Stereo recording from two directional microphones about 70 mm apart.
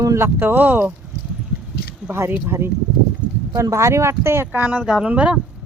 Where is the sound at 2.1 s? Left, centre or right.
Right.